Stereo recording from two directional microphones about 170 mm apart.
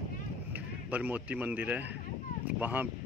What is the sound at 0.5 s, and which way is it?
Speech, 10° right (ahead or behind).